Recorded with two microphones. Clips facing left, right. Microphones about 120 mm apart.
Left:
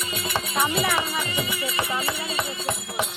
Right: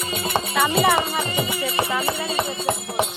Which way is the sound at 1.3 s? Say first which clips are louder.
Right 4 dB; 30° right (ahead or behind).